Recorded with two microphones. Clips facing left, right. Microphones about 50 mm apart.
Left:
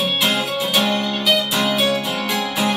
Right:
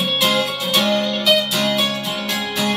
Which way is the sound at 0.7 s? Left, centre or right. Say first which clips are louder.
Right 3 dB; centre.